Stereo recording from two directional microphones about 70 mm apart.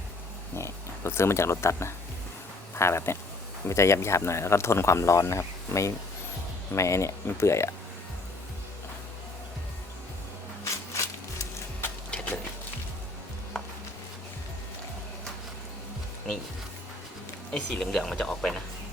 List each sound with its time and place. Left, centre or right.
0.5 s speech: left
10.6 s shuffling cards: left
12.1 s a sound: centre
17.5 s speech: centre